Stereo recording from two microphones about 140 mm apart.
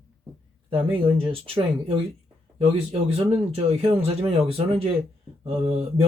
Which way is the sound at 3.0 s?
45° right (ahead or behind).